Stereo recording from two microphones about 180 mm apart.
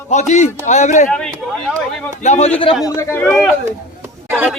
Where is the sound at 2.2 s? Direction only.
40° left (ahead or behind).